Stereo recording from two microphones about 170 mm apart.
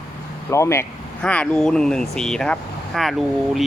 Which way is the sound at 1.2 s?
5° left (ahead or behind).